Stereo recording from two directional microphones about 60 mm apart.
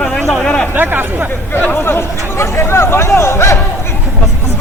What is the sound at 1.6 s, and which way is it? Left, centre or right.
Chatter, left.